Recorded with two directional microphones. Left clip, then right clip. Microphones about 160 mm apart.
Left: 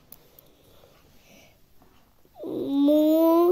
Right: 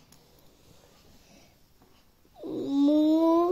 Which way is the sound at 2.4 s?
20° left (ahead or behind).